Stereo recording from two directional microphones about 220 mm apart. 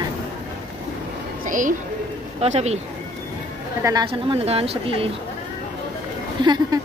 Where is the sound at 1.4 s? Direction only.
35° right (ahead or behind).